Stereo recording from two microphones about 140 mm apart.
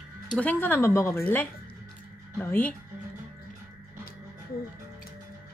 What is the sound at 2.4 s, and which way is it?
Speech, 15° left (ahead or behind).